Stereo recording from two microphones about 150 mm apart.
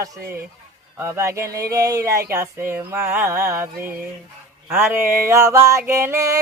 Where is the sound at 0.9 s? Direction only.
20° right (ahead or behind).